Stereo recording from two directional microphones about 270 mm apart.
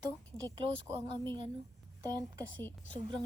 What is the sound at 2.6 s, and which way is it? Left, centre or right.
Speech, centre.